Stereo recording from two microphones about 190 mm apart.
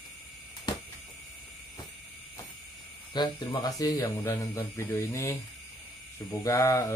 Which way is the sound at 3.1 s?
20° left (ahead or behind).